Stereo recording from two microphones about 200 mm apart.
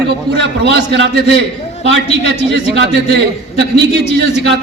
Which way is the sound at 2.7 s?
60° right (ahead or behind).